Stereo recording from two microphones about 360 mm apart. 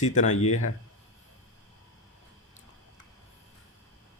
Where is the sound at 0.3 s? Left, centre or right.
Left.